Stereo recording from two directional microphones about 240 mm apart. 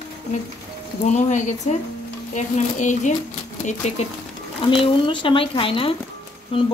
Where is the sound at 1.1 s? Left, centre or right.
Left.